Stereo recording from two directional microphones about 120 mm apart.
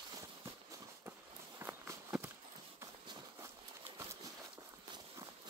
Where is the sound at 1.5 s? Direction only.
20° right (ahead or behind).